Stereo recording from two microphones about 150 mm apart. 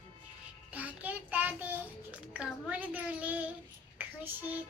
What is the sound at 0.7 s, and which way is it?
A child's voice, 10° right (ahead or behind).